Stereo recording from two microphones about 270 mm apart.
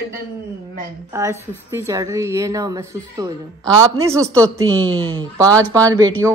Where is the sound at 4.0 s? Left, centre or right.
Centre.